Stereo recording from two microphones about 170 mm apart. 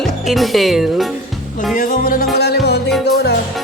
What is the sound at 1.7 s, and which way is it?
Music, 55° left (ahead or behind).